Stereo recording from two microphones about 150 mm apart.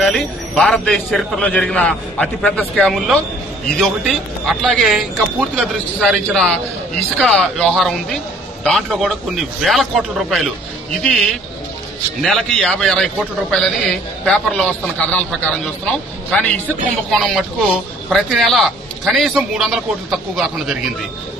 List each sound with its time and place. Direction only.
0.0 s a man's voice: centre (ahead or behind)
17.1 s a man's voice: centre (ahead or behind)